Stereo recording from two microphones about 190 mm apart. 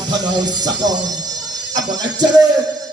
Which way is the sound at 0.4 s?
20° right (ahead or behind).